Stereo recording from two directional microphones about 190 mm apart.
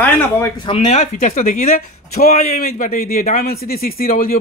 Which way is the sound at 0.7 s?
35° left (ahead or behind).